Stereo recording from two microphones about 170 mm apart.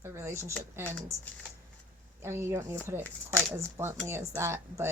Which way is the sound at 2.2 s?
15° right (ahead or behind).